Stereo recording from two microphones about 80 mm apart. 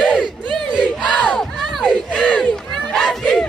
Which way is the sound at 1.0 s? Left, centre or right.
Centre.